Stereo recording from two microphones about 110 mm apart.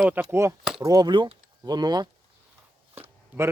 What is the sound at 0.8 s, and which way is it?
Speech, 35° right (ahead or behind).